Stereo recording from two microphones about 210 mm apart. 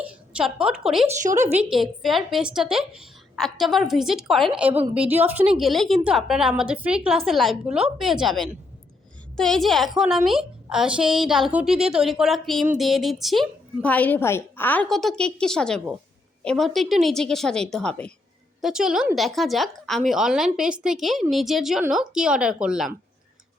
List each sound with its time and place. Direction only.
0.0 s a woman's voice: 5° right (ahead or behind)
1.0 s a woman's voice: 35° right (ahead or behind)
1.7 s a woman's voice: centre (ahead or behind)